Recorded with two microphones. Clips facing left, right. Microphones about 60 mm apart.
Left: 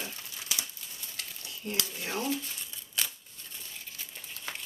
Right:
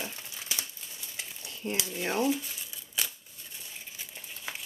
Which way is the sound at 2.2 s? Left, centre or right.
Centre.